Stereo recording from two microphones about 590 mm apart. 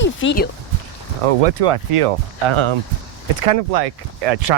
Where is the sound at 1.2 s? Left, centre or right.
Right.